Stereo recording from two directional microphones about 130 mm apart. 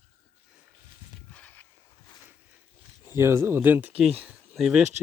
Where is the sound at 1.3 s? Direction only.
10° left (ahead or behind).